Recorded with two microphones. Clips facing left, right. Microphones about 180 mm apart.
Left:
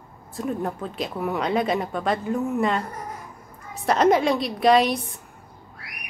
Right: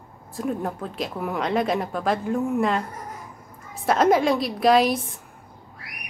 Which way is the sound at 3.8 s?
Centre (ahead or behind).